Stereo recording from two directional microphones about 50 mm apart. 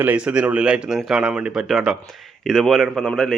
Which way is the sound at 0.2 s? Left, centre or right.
Right.